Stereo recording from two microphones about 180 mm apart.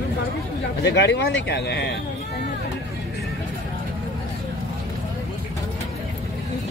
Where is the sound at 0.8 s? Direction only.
70° left (ahead or behind).